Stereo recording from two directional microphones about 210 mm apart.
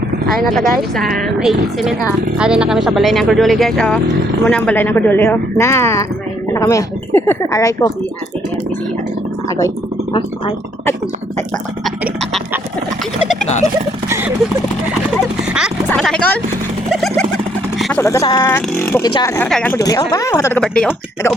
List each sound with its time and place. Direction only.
0.6 s speech: 45° right (ahead or behind)
0.9 s speech: centre (ahead or behind)
9.5 s a sound: 15° left (ahead or behind)
15.9 s speech: 5° left (ahead or behind)
16.9 s a sound: centre (ahead or behind)
17.7 s speech: centre (ahead or behind)
18.0 s speech: 15° left (ahead or behind)
19.0 s speech: 20° left (ahead or behind)
19.4 s speech: 5° left (ahead or behind)
20.6 s speech: 5° left (ahead or behind)